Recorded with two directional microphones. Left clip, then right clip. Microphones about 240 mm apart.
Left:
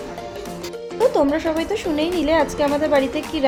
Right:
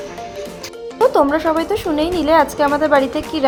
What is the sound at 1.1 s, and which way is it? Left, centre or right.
Speech, centre.